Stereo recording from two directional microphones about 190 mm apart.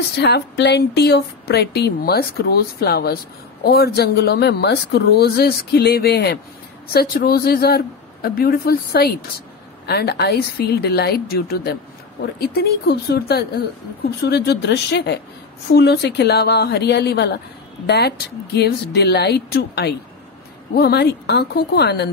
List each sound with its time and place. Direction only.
0.2 s speech: 60° left (ahead or behind)